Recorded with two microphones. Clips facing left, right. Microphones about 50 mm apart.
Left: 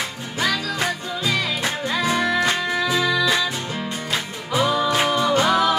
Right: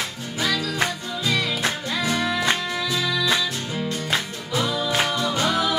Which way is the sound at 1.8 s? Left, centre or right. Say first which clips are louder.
Left 3 dB; left.